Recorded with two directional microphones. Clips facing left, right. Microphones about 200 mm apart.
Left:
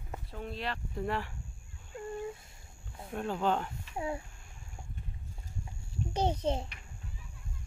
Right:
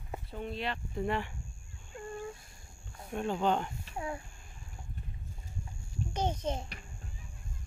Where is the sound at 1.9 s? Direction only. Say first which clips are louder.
Left 3 dB; 20° left (ahead or behind).